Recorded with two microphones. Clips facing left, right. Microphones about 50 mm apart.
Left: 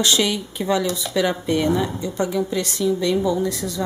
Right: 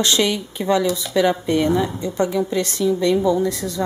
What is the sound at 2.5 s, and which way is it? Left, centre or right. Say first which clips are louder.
Speech: right 3 dB; centre.